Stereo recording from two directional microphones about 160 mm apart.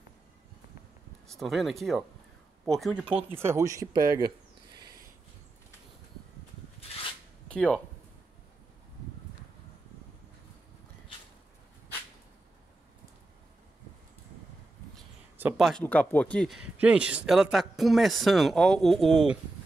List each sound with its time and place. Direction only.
1.2 s speech: centre (ahead or behind)
3.3 s speech: 15° right (ahead or behind)
7.4 s speech: 5° left (ahead or behind)
15.3 s a sound: 10° right (ahead or behind)
15.8 s speech: 10° left (ahead or behind)